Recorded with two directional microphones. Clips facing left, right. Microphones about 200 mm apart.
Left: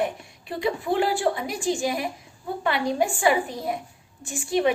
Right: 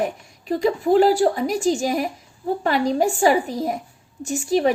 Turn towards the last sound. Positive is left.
turn(degrees=-40)  # may be behind; listen again after turning